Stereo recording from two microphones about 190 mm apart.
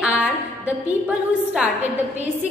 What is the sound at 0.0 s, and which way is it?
A woman's voice, 5° right (ahead or behind).